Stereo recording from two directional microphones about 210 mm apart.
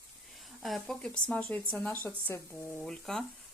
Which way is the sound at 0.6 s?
Centre (ahead or behind).